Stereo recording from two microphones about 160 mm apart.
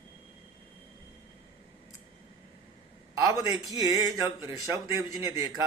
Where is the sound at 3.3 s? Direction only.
20° right (ahead or behind).